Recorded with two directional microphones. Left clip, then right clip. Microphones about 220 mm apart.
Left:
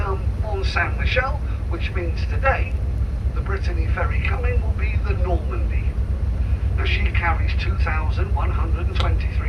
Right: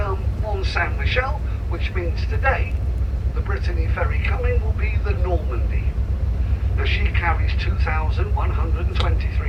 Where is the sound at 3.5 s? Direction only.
50° left (ahead or behind).